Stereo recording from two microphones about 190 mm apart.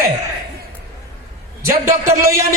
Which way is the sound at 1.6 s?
15° right (ahead or behind).